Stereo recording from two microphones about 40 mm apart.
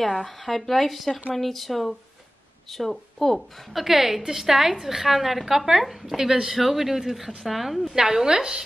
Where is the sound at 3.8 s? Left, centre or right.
Centre.